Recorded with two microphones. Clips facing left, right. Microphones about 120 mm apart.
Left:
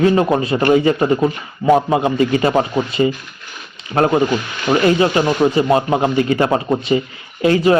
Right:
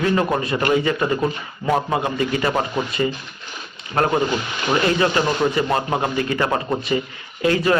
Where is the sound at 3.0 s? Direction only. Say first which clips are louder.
Left 6 dB; 35° left (ahead or behind).